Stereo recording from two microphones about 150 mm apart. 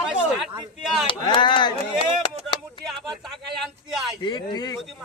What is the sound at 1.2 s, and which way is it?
Speech, 35° left (ahead or behind).